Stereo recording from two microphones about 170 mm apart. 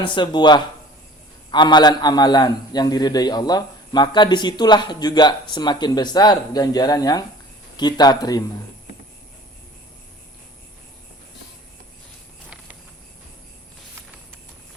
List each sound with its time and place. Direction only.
0.0 s a man's voice: 30° left (ahead or behind)